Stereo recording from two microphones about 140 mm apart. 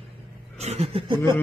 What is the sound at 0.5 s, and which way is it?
Chuckle, 50° right (ahead or behind).